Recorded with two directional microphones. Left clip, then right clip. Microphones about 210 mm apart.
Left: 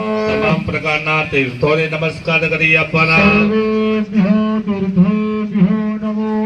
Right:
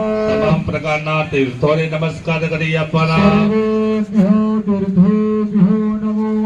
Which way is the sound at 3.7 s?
55° right (ahead or behind).